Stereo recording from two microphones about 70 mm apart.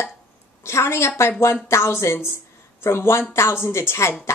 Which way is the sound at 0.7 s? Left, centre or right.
Left.